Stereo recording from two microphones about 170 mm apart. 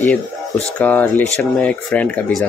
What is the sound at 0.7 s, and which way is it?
Speech, 10° left (ahead or behind).